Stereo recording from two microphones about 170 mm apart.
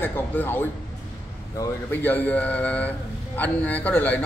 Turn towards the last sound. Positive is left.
turn(degrees=10)  # may be behind; listen again after turning